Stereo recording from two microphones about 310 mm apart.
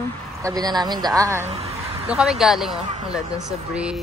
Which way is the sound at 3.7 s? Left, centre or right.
Centre.